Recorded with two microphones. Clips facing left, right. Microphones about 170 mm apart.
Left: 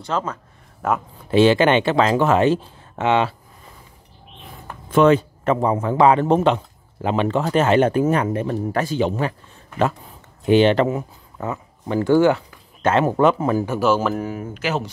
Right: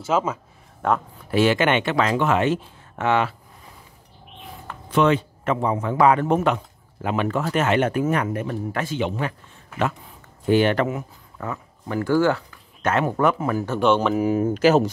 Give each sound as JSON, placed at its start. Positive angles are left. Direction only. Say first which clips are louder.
{"t": 0.0, "sound": "speech", "louder": "right 2 dB", "side_deg": -5}
{"t": 0.8, "sound": "speech", "louder": "even", "side_deg": 5}
{"t": 1.3, "sound": "speech", "louder": "left 4 dB", "side_deg": 30}
{"t": 3.0, "sound": "speech", "louder": "left 2 dB", "side_deg": 25}
{"t": 4.9, "sound": "speech", "louder": "left 4 dB", "side_deg": 40}
{"t": 5.9, "sound": "speech", "louder": "left 2 dB", "side_deg": 25}
{"t": 10.4, "sound": "speech", "louder": "left 4 dB", "side_deg": 20}
{"t": 13.7, "sound": "speech", "louder": "even", "side_deg": 5}
{"t": 14.4, "sound": "speech", "louder": "right 8 dB", "side_deg": -40}